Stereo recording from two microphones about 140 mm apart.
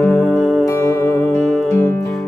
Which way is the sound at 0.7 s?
20° left (ahead or behind).